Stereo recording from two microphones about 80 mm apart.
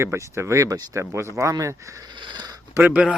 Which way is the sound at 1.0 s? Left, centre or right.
Right.